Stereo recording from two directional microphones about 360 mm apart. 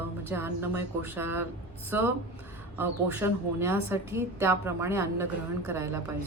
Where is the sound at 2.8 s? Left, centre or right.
Centre.